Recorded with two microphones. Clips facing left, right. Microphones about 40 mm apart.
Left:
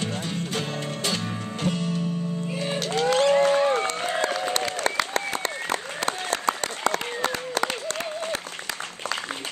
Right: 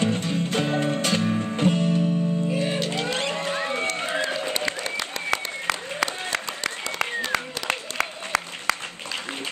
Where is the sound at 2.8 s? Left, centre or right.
Right.